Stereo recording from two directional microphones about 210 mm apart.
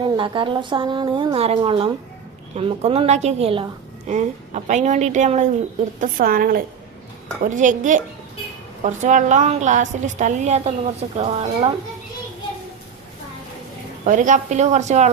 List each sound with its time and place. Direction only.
0.0 s a woman's voice: 25° right (ahead or behind)
14.0 s a woman's voice: 40° right (ahead or behind)